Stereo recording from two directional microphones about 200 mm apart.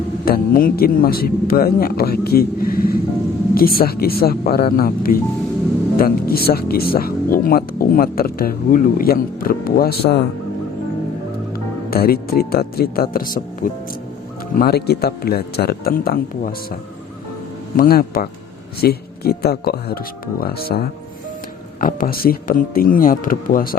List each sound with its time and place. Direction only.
0.3 s speech: 45° left (ahead or behind)
11.5 s speech: 50° left (ahead or behind)
17.7 s speech: 45° left (ahead or behind)